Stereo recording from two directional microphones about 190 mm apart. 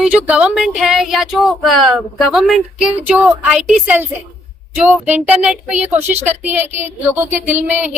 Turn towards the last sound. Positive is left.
turn(degrees=-10)  # may be behind; listen again after turning